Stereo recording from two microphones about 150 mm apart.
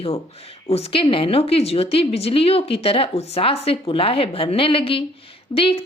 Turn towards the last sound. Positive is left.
turn(degrees=40)  # may be behind; listen again after turning